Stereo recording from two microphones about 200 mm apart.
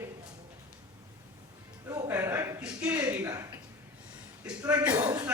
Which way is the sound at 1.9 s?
15° right (ahead or behind).